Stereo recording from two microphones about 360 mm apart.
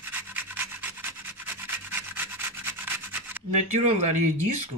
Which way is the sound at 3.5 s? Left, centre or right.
Centre.